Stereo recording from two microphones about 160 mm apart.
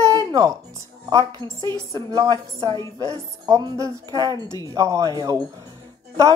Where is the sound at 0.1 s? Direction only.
25° right (ahead or behind).